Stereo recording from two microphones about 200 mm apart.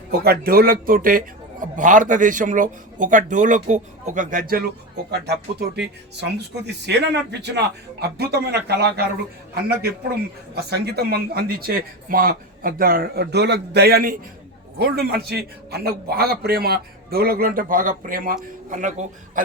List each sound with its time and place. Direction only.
0.3 s a man's voice: 50° right (ahead or behind)
5.2 s a man's voice: 55° right (ahead or behind)
10.5 s a man's voice: 55° right (ahead or behind); by 19.0 s 40° right (ahead or behind)